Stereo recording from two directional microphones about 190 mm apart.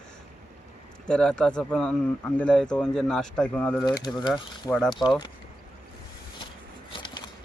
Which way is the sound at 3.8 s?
20° left (ahead or behind).